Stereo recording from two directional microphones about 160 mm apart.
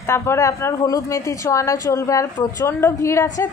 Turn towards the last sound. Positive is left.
turn(degrees=15)  # may be behind; listen again after turning